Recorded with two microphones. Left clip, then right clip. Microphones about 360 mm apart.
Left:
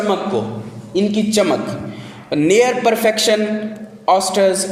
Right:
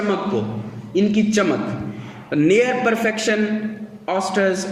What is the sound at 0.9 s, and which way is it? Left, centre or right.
A man's voice, centre.